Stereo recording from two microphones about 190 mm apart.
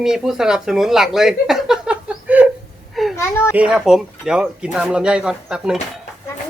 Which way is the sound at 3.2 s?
15° left (ahead or behind).